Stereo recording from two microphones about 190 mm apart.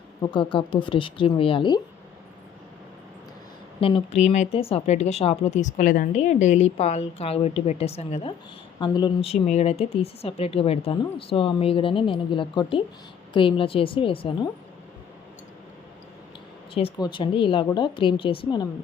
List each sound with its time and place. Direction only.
0.2 s speech: 25° left (ahead or behind)
3.8 s speech: 30° left (ahead or behind)
16.7 s speech: 25° left (ahead or behind)